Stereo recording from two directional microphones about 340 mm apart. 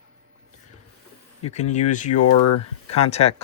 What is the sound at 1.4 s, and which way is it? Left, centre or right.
Speech, centre.